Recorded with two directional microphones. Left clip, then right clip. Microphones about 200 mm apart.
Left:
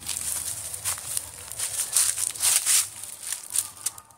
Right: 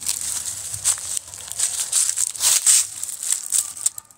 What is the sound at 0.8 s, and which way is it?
Crumpling, 45° right (ahead or behind).